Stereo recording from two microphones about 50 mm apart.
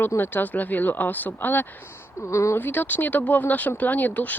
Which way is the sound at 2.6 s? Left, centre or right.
Left.